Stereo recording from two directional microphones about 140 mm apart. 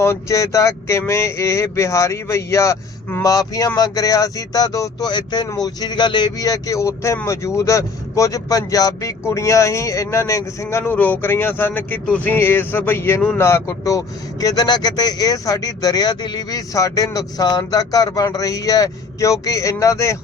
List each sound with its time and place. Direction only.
0.0 s speech: 20° left (ahead or behind)